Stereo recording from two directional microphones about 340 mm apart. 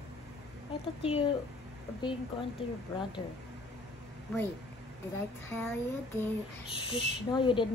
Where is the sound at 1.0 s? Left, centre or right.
Centre.